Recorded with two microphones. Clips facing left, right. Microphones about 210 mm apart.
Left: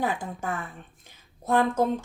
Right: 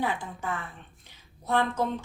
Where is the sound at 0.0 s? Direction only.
45° left (ahead or behind).